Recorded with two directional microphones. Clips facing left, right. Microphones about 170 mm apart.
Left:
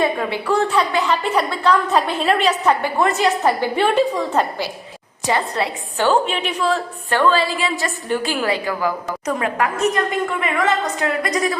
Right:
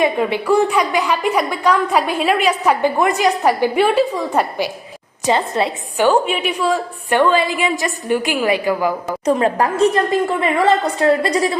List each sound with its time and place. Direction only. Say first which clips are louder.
0.0 s a woman's voice: right 3 dB; 15° right (ahead or behind)
9.2 s a woman's voice: right 5 dB; 30° right (ahead or behind)